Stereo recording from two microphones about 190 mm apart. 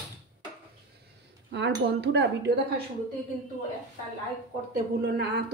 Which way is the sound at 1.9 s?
65° right (ahead or behind).